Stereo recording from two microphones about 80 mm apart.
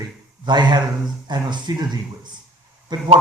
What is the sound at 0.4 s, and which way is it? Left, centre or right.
Speech, right.